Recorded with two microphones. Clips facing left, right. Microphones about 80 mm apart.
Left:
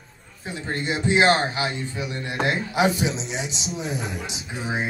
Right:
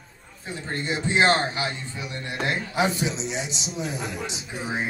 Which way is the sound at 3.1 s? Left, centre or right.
Centre.